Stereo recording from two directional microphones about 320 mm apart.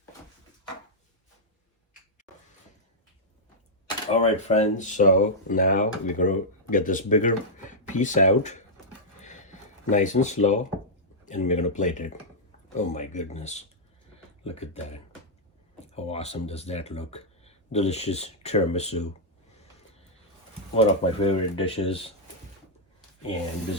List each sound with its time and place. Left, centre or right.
4.1 s speech: left
9.2 s a sound: left
11.3 s speech: left
20.7 s speech: centre